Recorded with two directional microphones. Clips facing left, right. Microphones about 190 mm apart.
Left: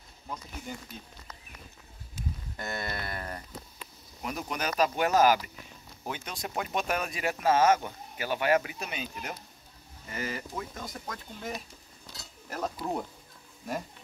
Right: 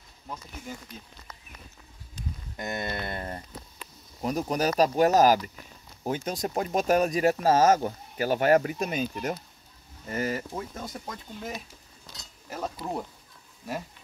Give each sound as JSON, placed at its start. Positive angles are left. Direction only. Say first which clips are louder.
{"t": 0.7, "sound": "speech", "louder": "right 1 dB", "side_deg": 0}
{"t": 2.5, "sound": "speech", "louder": "right 4 dB", "side_deg": -20}
{"t": 4.2, "sound": "speech", "louder": "right 7 dB", "side_deg": -35}
{"t": 10.5, "sound": "speech", "louder": "right 3 dB", "side_deg": -25}
{"t": 12.1, "sound": "mechanisms", "louder": "right 1 dB", "side_deg": 0}